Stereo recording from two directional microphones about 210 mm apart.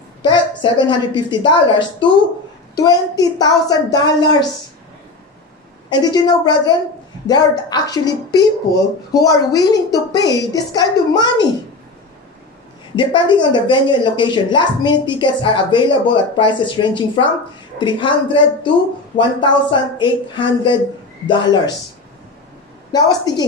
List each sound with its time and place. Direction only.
0.2 s a woman's voice: 20° left (ahead or behind)
5.9 s a woman's voice: 20° left (ahead or behind)
12.9 s a woman's voice: 20° left (ahead or behind)
22.9 s a woman's voice: 20° left (ahead or behind)